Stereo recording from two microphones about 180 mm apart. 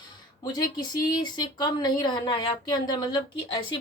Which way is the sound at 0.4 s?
20° left (ahead or behind).